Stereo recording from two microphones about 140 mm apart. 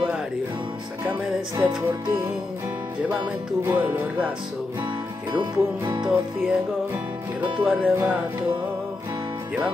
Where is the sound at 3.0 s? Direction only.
10° right (ahead or behind).